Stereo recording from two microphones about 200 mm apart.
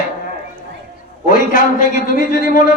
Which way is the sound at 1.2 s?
40° left (ahead or behind).